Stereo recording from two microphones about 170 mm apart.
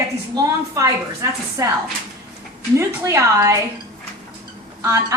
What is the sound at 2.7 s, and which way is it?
Speech, 15° right (ahead or behind).